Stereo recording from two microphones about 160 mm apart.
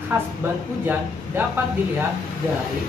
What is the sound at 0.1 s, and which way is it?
Speech, 15° right (ahead or behind).